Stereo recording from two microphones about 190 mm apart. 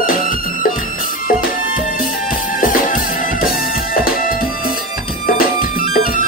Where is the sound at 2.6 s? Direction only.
45° left (ahead or behind).